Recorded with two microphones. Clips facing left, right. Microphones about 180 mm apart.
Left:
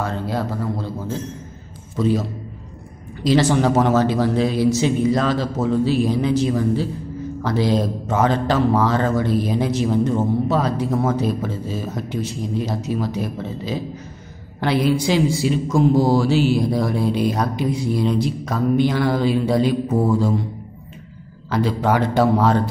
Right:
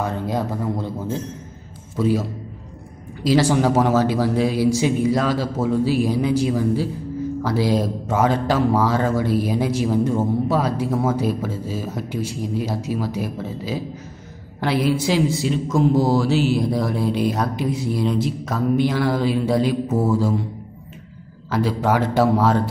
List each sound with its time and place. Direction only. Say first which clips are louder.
0.0 s speech: even; 15° right (ahead or behind)
3.3 s speech: left 1 dB; 5° right (ahead or behind)
21.5 s speech: left 1 dB; 5° right (ahead or behind)